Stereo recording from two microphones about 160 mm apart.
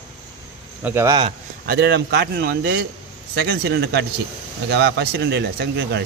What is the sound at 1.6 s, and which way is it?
Speech, 85° right.